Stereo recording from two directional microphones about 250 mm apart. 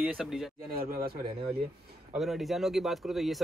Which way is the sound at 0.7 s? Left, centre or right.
Right.